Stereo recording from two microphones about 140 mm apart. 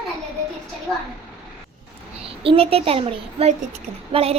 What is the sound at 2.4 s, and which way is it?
A woman's voice, 40° right (ahead or behind).